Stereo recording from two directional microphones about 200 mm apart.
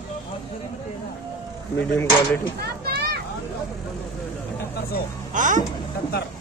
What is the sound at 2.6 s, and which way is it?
Children playing, 50° right (ahead or behind).